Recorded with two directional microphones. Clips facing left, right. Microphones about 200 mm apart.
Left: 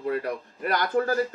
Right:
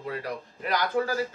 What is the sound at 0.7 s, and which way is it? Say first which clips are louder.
Speech: left 2 dB; 50° left (ahead or behind).